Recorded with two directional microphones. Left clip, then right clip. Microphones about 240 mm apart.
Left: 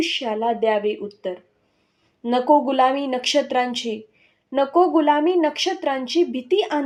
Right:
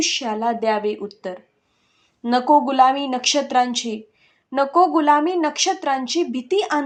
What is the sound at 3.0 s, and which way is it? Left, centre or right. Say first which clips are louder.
Speech: right 2 dB; right.